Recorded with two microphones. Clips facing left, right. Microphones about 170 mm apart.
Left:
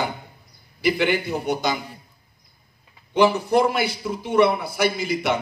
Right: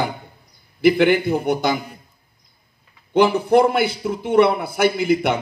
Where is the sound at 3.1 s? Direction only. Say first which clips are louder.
Right 3 dB; 55° right (ahead or behind).